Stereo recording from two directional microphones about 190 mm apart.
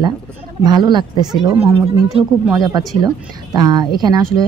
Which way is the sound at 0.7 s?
25° right (ahead or behind).